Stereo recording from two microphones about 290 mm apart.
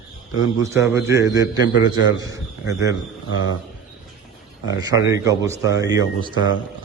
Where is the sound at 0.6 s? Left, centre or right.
Centre.